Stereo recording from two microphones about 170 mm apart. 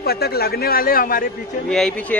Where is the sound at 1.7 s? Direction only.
5° left (ahead or behind).